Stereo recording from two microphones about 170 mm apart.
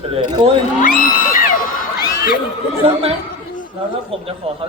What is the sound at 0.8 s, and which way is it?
Whoop, 50° left (ahead or behind).